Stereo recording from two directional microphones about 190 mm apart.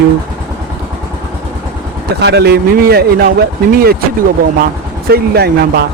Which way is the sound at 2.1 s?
60° right (ahead or behind).